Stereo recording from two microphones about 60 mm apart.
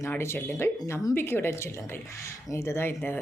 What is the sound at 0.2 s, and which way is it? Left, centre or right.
A woman's voice, left.